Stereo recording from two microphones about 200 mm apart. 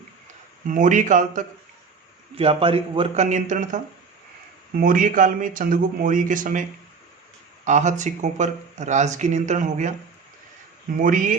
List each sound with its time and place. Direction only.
0.7 s a man's voice: 40° right (ahead or behind)
4.8 s speech: 45° right (ahead or behind)
10.9 s speech: 45° right (ahead or behind)